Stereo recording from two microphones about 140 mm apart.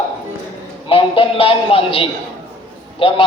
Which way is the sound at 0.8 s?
40° left (ahead or behind).